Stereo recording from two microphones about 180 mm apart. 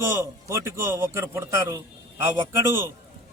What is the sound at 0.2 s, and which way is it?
A man's voice, 15° right (ahead or behind).